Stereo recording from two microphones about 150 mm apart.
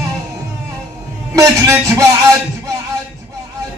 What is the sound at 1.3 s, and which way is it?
Speech, 20° right (ahead or behind).